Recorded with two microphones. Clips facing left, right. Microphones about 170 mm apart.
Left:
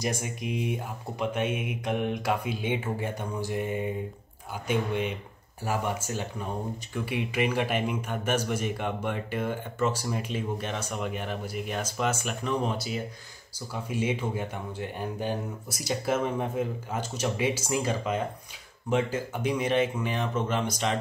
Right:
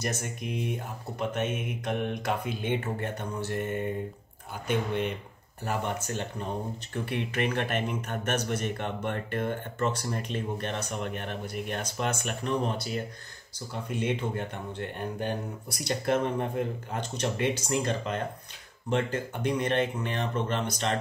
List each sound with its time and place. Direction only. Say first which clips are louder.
0.0 s speech: left 2 dB; 10° left (ahead or behind)
0.4 s speech: left 2 dB; 60° left (ahead or behind)
1.3 s speech: left 2 dB; 10° left (ahead or behind)
14.0 s speech: even; 5° left (ahead or behind)